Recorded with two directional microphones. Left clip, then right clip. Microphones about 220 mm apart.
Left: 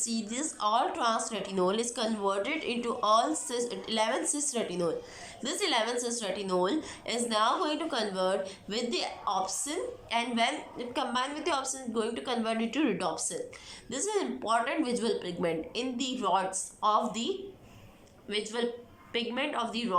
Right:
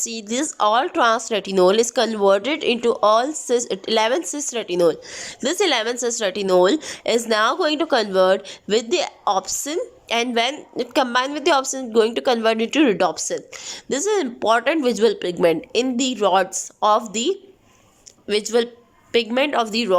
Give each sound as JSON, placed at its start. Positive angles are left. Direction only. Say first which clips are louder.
{"t": 0.0, "sound": "speech", "louder": "right 10 dB", "side_deg": -40}